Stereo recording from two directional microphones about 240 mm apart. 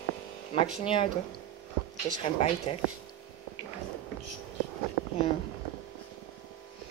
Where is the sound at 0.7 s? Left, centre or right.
Left.